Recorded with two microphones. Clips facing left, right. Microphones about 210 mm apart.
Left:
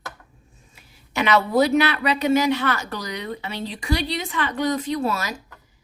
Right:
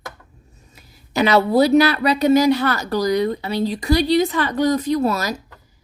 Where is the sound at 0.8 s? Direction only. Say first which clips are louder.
Right 6 dB; 35° right (ahead or behind).